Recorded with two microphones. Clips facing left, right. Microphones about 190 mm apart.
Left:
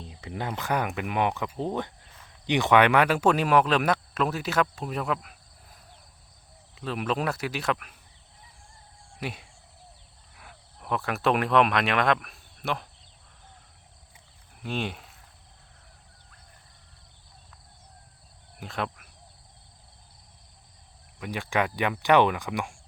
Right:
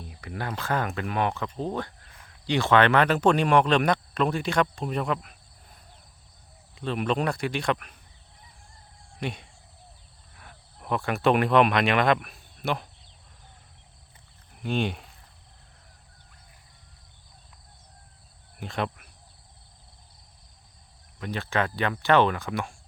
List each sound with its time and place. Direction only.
0.0 s speech: 25° left (ahead or behind); by 7.9 s 5° left (ahead or behind)
9.2 s speech: 5° left (ahead or behind)
14.6 s speech: centre (ahead or behind)
18.6 s speech: centre (ahead or behind)
21.2 s speech: 15° left (ahead or behind)